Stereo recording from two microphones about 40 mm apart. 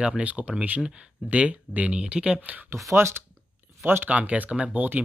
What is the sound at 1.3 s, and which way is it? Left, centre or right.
Speech, right.